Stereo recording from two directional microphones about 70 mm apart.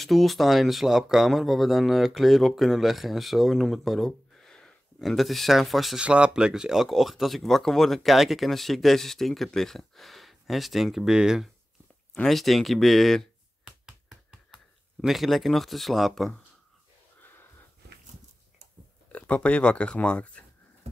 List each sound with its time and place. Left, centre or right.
0.0 s speech: centre
5.9 s speech: centre
14.5 s speech: centre
17.2 s sniff: left
19.1 s speech: centre